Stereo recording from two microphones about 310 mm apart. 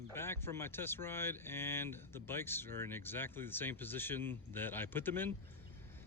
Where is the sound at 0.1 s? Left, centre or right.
Centre.